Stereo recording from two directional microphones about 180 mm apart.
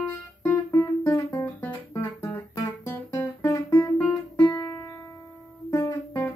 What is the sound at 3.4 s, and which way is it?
Guitar, 15° left (ahead or behind).